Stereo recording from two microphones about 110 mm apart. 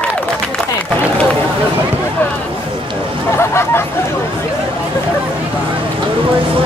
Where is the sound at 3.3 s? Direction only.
25° left (ahead or behind).